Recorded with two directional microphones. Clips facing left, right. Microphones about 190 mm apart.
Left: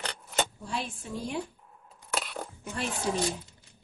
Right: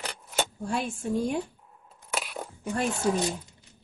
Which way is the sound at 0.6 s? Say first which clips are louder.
Right 6 dB; 50° right (ahead or behind).